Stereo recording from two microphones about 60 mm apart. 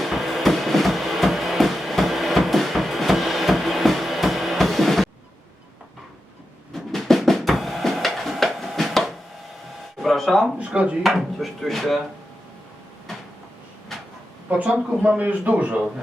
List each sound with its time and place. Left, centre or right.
0.0 s a sound: centre
6.7 s drum: centre
10.0 s a sound: centre
10.7 s a man's voice: centre
11.0 s chopping: centre
14.5 s a man's voice: centre